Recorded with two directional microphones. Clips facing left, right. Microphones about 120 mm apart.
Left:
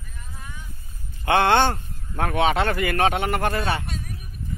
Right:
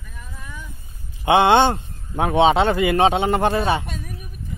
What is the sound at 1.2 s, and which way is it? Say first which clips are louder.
Speech: right 4 dB; 20° right (ahead or behind).